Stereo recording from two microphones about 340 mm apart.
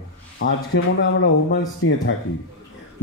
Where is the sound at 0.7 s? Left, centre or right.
Left.